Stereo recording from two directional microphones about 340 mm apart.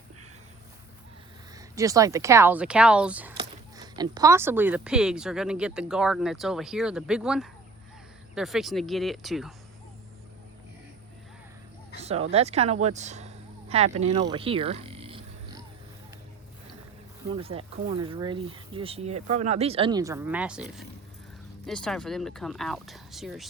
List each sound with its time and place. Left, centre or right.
1.5 s speech: centre
11.9 s speech: centre
12.8 s a sound: centre
17.3 s speech: centre